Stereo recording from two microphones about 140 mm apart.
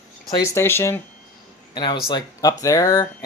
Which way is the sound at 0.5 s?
15° left (ahead or behind).